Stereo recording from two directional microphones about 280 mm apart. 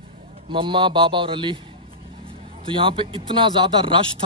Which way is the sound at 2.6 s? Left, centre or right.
Centre.